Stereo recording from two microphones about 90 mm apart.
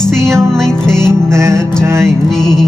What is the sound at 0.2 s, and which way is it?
Music, 30° right (ahead or behind).